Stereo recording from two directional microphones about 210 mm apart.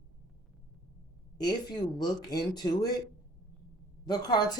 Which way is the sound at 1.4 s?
20° left (ahead or behind).